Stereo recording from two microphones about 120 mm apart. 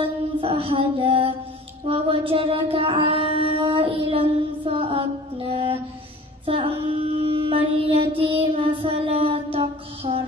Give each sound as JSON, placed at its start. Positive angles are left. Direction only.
{"t": 0.0, "sound": "music", "side_deg": -50}
{"t": 1.9, "sound": "female singing", "side_deg": -50}
{"t": 6.4, "sound": "child singing", "side_deg": -50}